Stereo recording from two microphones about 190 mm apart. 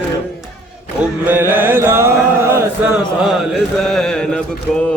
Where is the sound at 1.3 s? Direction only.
10° right (ahead or behind).